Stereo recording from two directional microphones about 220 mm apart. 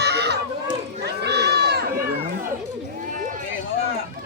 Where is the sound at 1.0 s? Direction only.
50° right (ahead or behind).